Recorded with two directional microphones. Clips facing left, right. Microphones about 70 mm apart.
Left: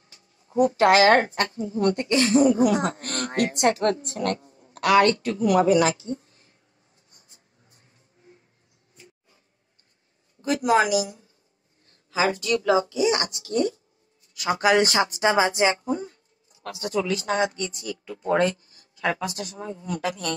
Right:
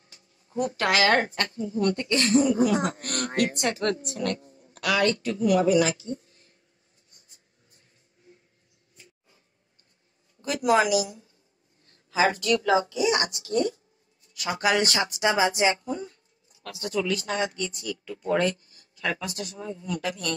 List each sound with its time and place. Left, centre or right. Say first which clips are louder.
0.6 s speech: left 7 dB; left
1.9 s speech: left 3 dB; left
2.4 s a woman's voice: left 3 dB; left
7.1 s a sound: left 2 dB; left
10.5 s a woman's voice: left 1 dB; left
12.2 s speech: even; right
15.0 s speech: left 3 dB; left
19.5 s a woman's voice: left 1 dB; left